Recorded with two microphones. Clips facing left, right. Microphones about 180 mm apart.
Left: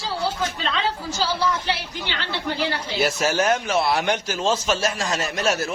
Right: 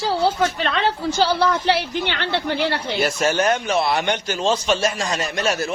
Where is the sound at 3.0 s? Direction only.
5° left (ahead or behind).